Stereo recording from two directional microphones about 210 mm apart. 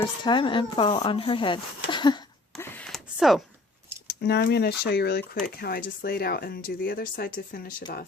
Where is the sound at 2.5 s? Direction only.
5° left (ahead or behind).